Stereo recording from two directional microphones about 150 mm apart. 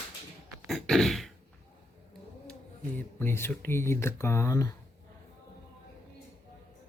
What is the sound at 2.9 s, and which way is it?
Speech, 15° left (ahead or behind).